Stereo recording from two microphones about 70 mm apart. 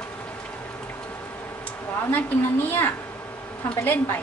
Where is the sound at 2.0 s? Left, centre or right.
Left.